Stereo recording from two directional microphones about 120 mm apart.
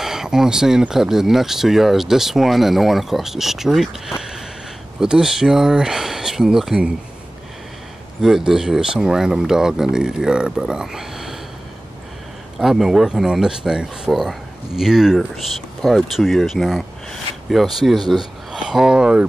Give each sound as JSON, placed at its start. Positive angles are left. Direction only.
{"t": 0.0, "sound": "speech", "side_deg": -5}
{"t": 5.0, "sound": "speech", "side_deg": -5}
{"t": 8.2, "sound": "speech", "side_deg": -5}
{"t": 12.5, "sound": "speech", "side_deg": -5}